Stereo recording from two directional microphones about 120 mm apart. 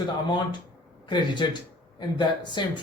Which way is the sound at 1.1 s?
40° left (ahead or behind).